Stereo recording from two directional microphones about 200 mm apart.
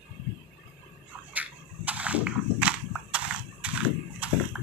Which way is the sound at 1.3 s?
5° right (ahead or behind).